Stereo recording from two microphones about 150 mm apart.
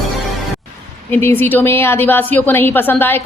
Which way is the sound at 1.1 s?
15° left (ahead or behind).